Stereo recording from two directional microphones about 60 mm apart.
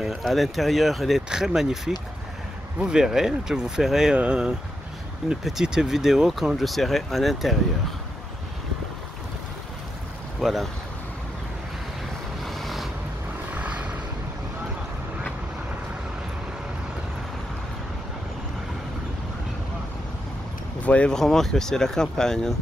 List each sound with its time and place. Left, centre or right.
0.2 s speech: centre
10.4 s speech: centre
12.4 s vehicle: centre
13.6 s vehicle: right
20.8 s speech: left
21.1 s speech: centre